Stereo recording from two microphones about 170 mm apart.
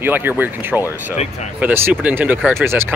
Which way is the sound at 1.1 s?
40° left (ahead or behind).